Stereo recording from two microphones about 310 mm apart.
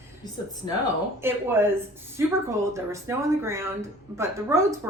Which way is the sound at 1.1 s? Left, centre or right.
Centre.